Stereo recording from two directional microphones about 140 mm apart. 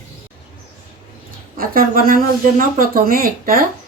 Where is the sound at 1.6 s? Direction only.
90° right.